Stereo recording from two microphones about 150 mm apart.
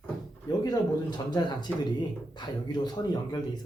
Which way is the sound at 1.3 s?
30° left (ahead or behind).